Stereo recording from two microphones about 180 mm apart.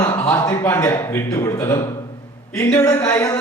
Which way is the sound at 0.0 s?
20° left (ahead or behind).